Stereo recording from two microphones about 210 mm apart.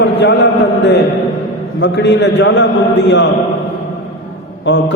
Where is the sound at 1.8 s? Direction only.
55° left (ahead or behind).